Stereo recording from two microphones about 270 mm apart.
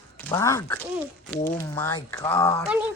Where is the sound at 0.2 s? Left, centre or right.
Centre.